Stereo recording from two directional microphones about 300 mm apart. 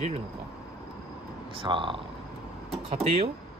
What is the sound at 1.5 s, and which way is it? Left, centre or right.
Speech, centre.